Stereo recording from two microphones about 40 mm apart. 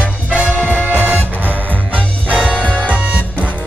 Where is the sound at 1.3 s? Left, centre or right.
Right.